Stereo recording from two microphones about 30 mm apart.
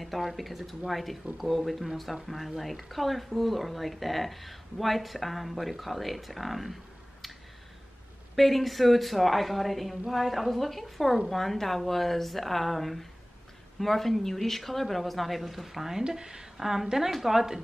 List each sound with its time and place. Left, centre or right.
0.0 s speech: centre
8.4 s speech: centre
16.1 s speech: right
16.5 s a woman's voice: centre